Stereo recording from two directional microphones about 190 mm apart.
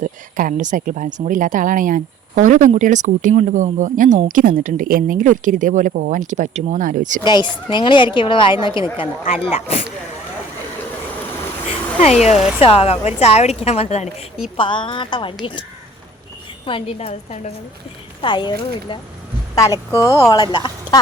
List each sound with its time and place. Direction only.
0.0 s a woman's voice: 45° right (ahead or behind)
7.3 s a woman's voice: 25° left (ahead or behind)
11.9 s a woman's voice: 35° left (ahead or behind)
16.6 s a woman's voice: 30° left (ahead or behind)